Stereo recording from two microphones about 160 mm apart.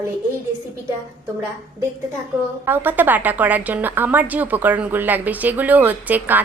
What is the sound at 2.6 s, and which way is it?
A woman's voice, 10° right (ahead or behind).